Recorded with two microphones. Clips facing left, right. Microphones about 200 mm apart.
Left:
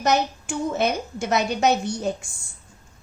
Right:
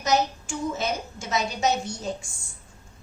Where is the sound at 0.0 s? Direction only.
60° left (ahead or behind).